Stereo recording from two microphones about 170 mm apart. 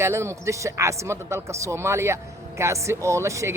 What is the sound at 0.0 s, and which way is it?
Speech, 15° right (ahead or behind).